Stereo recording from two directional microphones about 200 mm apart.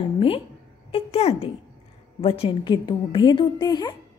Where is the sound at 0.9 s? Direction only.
30° left (ahead or behind).